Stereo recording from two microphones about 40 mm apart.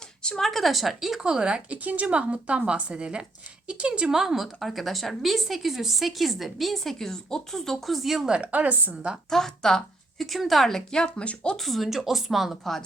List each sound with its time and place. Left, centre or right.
0.3 s a woman's voice: centre
1.2 s a woman's voice: right
1.8 s a woman's voice: right; by 8.3 s centre
8.4 s a woman's voice: right
9.3 s speech: centre
10.2 s a woman's voice: centre; by 11.5 s left
11.5 s a woman's voice: centre